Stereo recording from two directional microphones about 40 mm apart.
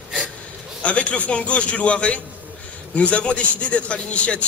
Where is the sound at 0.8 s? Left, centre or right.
Left.